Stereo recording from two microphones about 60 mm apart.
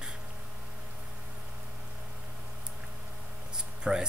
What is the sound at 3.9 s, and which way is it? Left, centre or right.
Speech, right.